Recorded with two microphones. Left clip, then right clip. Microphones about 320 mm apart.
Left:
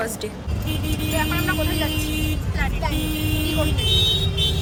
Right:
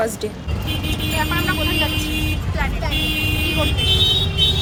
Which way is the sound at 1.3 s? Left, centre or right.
Centre.